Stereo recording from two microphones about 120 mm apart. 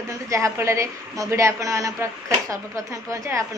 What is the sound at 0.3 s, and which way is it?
A woman's voice, 25° right (ahead or behind).